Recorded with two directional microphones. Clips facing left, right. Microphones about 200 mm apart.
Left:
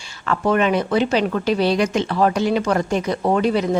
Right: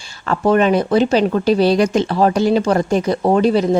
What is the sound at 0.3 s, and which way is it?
A woman's voice, 35° right (ahead or behind).